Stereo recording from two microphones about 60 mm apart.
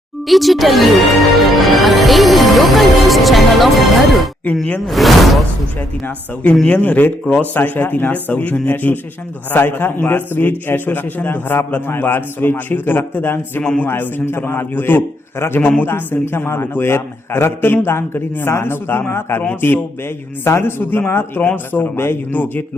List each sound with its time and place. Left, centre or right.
0.3 s music: centre
4.9 s speech: centre
6.7 s a man's voice: left